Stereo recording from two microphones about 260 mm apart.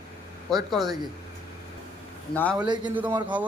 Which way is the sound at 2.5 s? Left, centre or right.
Centre.